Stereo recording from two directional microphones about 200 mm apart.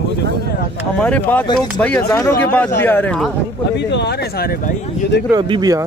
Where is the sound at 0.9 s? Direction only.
5° left (ahead or behind).